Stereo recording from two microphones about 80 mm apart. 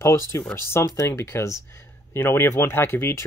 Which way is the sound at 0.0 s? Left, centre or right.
Left.